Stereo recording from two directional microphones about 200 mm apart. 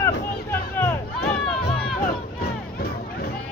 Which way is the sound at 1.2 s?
50° left (ahead or behind).